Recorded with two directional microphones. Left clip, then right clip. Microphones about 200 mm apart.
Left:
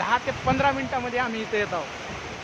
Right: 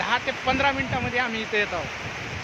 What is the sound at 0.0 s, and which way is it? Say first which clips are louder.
Speech: even; centre (ahead or behind).